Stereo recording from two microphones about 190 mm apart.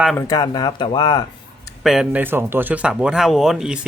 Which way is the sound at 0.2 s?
20° left (ahead or behind).